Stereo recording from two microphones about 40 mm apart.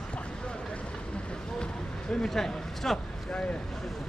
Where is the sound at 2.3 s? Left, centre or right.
Centre.